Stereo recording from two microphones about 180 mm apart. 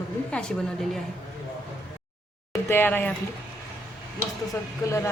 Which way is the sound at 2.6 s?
10° left (ahead or behind).